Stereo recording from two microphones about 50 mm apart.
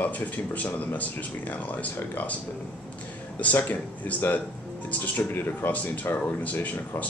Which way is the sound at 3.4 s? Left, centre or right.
Left.